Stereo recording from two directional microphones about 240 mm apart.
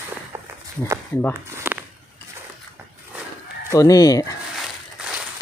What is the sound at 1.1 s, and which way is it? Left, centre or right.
Speech, centre.